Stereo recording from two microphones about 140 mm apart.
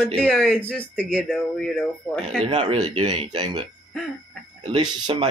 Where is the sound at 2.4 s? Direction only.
35° right (ahead or behind).